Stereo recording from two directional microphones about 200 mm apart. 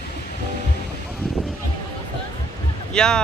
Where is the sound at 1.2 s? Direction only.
Centre (ahead or behind).